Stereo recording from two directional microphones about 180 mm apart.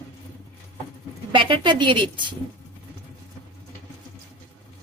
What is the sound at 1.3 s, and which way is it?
Speech, 25° right (ahead or behind).